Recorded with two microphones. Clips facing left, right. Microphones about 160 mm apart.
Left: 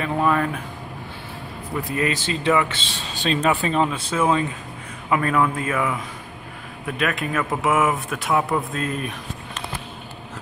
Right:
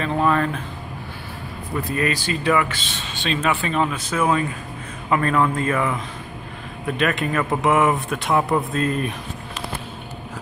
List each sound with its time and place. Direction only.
0.0 s a man's voice: 10° left (ahead or behind)
1.9 s speech: 20° left (ahead or behind)
5.1 s a man's voice: 10° left (ahead or behind)